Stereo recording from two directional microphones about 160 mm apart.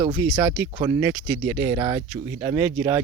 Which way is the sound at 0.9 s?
15° right (ahead or behind).